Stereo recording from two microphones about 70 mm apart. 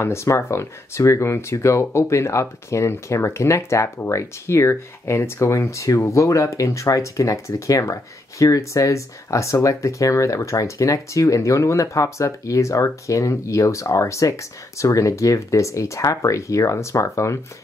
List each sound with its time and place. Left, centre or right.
0.0 s speech: left